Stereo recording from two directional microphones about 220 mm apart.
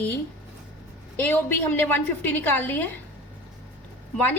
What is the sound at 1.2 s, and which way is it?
A woman's voice, 10° left (ahead or behind).